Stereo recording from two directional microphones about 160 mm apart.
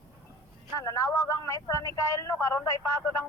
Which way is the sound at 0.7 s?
20° left (ahead or behind).